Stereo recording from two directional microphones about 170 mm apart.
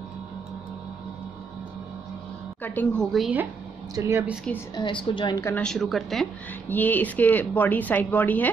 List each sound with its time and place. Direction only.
2.6 s a woman's voice: 10° left (ahead or behind); by 3.4 s 5° right (ahead or behind)
3.9 s speech: 20° right (ahead or behind)
4.7 s a woman's voice: 30° left (ahead or behind)
5.4 s a woman's voice: 10° left (ahead or behind)